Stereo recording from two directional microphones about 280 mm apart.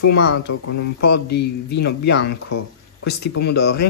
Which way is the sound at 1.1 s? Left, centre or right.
Left.